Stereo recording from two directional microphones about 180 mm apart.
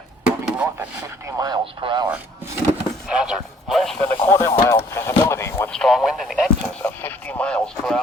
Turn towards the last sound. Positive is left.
turn(degrees=5)  # may be behind; listen again after turning